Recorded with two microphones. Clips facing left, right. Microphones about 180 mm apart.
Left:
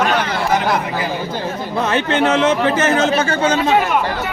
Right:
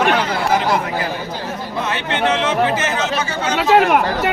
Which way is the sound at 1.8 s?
45° left (ahead or behind).